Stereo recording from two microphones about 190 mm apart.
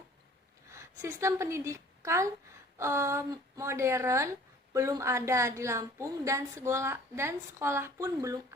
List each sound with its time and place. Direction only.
0.7 s a woman's voice: 15° right (ahead or behind)